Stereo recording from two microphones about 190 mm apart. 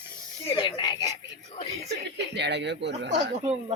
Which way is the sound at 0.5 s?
25° left (ahead or behind).